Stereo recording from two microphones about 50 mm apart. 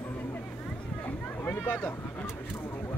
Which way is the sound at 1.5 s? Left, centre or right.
Left.